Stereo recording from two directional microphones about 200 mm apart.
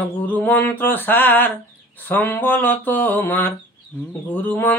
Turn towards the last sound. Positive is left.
turn(degrees=10)  # may be behind; listen again after turning